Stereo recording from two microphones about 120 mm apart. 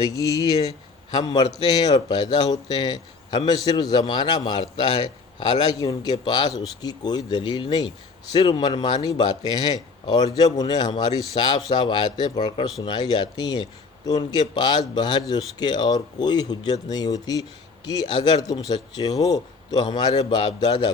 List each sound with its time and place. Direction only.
0.1 s a man's voice: 30° left (ahead or behind)
5.7 s a man's voice: 30° left (ahead or behind)